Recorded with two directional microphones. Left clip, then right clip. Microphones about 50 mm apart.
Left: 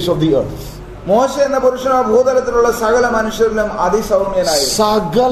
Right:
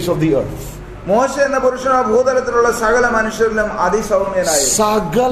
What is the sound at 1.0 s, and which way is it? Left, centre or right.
A man's voice, left.